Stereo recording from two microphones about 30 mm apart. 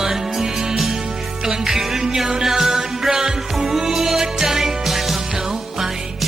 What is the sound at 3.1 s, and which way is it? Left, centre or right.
Music, right.